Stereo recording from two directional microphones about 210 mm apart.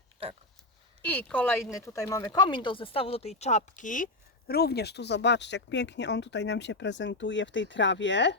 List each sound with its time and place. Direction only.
1.0 s speech: 10° left (ahead or behind); by 8.4 s 60° left (ahead or behind)